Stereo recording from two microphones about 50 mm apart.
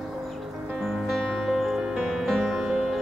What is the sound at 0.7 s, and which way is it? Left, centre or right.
Music, centre.